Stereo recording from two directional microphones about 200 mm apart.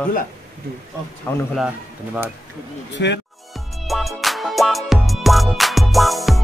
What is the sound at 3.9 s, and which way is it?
Music, centre (ahead or behind).